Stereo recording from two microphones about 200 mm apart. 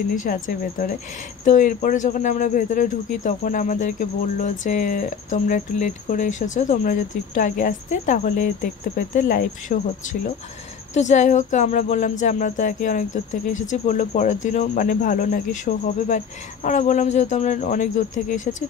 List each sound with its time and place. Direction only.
0.1 s speech: 40° left (ahead or behind)
11.0 s speech: 35° left (ahead or behind)